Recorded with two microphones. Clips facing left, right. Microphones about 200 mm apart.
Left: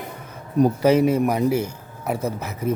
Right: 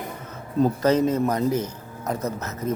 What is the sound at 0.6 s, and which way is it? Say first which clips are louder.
A man's voice: left 3 dB; 10° left (ahead or behind).